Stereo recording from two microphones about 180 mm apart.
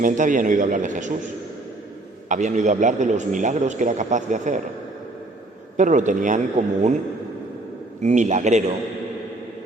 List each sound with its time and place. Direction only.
0.0 s a man's voice: 45° right (ahead or behind)
2.3 s a man's voice: 40° right (ahead or behind)
5.7 s a man's voice: 45° right (ahead or behind)
8.0 s a man's voice: 40° right (ahead or behind)